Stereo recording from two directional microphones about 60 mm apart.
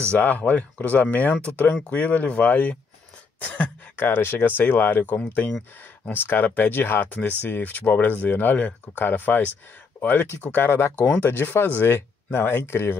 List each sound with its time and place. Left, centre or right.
0.1 s speech: left
3.3 s a sound: left
3.9 s speech: left